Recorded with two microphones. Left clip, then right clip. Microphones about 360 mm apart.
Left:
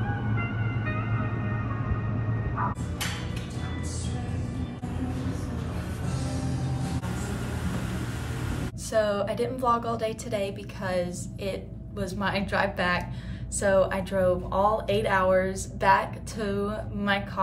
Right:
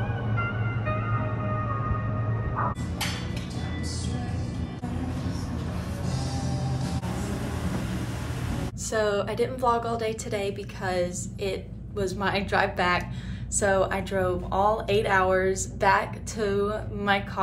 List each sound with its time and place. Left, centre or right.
0.8 s music: centre
8.9 s speech: centre